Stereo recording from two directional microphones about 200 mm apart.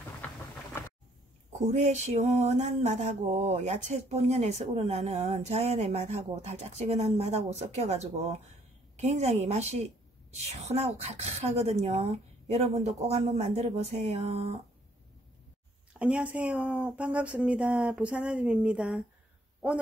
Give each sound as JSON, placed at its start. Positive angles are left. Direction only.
{"t": 0.2, "sound": "rain", "side_deg": 5}
{"t": 1.6, "sound": "mantra", "side_deg": -35}
{"t": 8.9, "sound": "a woman's voice", "side_deg": -35}
{"t": 11.0, "sound": "mantra", "side_deg": -35}
{"t": 16.0, "sound": "speech", "side_deg": -5}